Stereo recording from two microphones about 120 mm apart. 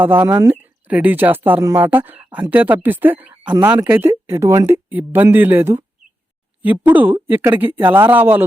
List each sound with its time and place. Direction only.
0.0 s speech: 20° right (ahead or behind)